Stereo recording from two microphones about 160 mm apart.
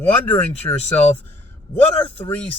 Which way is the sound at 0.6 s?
20° left (ahead or behind).